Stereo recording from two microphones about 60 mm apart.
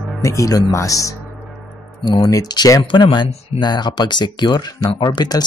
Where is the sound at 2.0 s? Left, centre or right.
Left.